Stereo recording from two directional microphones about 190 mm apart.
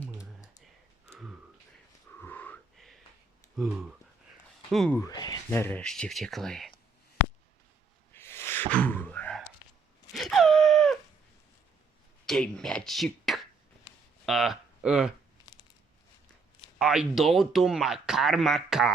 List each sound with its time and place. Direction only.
0.6 s a sound: centre (ahead or behind)
2.1 s wheeze: 10° left (ahead or behind)
3.6 s speech: centre (ahead or behind)
4.9 s speech: 20° left (ahead or behind); by 6.7 s centre (ahead or behind)
8.1 s gasp: 10° left (ahead or behind)
10.1 s wail: centre (ahead or behind)
12.2 s speech: 5° left (ahead or behind)
16.7 s speech: 5° right (ahead or behind)